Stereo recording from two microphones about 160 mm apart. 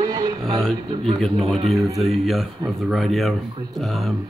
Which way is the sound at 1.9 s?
Centre (ahead or behind).